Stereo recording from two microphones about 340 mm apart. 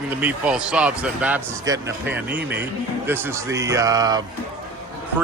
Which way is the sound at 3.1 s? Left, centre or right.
Centre.